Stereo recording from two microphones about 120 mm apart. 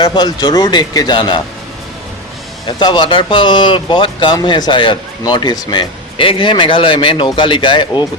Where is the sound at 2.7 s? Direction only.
40° left (ahead or behind).